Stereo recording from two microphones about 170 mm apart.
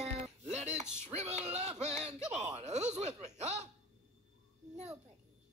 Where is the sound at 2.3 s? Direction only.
40° right (ahead or behind).